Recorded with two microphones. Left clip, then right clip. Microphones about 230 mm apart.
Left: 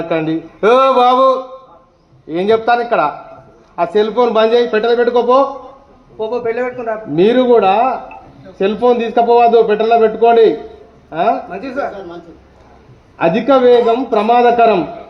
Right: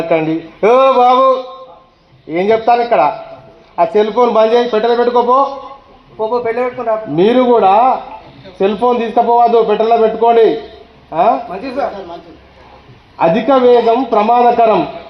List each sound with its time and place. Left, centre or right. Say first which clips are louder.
0.1 s a man's voice: right 3 dB; right
13.1 s a man's voice: right 1 dB; right